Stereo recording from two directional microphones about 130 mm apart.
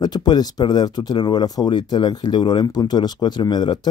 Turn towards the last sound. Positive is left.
turn(degrees=35)  # may be behind; listen again after turning